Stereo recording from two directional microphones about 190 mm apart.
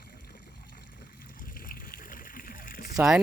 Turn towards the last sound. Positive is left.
turn(degrees=-5)  # may be behind; listen again after turning